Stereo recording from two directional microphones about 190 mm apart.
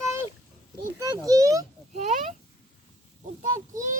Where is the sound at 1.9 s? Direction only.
40° right (ahead or behind).